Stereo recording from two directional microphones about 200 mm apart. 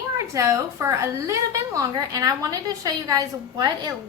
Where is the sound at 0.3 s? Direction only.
15° right (ahead or behind).